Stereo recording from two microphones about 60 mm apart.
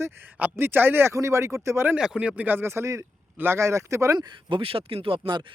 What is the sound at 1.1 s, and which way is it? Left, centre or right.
Speech, right.